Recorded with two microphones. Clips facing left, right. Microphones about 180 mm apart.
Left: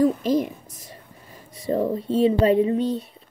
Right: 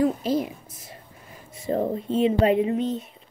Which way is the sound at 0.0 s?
40° left (ahead or behind).